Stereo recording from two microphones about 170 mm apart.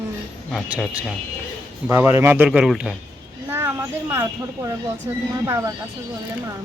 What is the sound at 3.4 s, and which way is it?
Speech, 15° right (ahead or behind).